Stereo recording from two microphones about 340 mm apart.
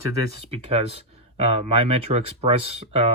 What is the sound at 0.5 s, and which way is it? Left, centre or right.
Speech, centre.